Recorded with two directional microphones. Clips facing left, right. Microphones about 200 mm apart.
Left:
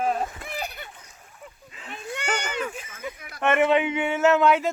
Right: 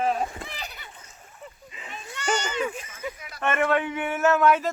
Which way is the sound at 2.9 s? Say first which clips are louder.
Right 1 dB; 55° left (ahead or behind).